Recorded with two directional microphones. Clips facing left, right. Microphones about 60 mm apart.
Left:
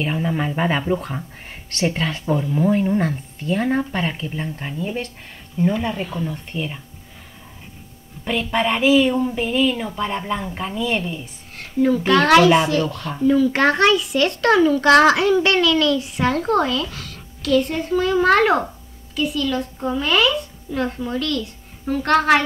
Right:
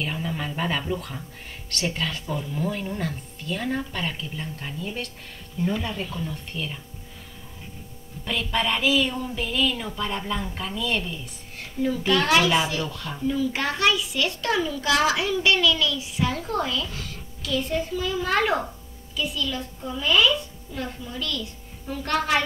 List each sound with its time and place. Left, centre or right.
0.0 s a woman's voice: left
8.3 s a woman's voice: left
11.8 s a child's voice: left